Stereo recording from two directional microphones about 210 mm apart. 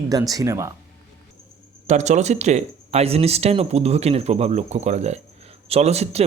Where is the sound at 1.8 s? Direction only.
35° right (ahead or behind).